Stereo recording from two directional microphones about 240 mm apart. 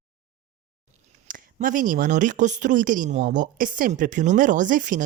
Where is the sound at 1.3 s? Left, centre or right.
Right.